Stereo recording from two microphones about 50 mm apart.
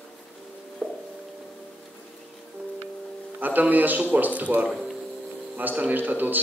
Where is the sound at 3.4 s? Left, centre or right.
Right.